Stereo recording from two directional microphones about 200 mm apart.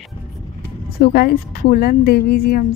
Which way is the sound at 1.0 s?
45° left (ahead or behind).